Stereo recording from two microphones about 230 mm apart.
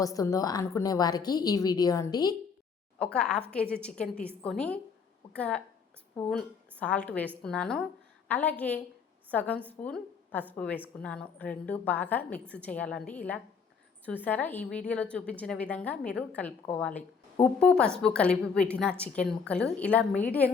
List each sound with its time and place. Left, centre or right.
0.0 s a woman's voice: centre
3.0 s a woman's voice: centre